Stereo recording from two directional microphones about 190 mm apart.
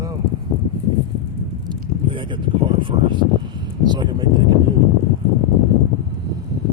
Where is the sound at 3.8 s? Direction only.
20° right (ahead or behind).